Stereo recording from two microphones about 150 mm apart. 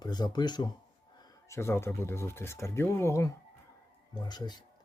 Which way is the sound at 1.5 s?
15° left (ahead or behind).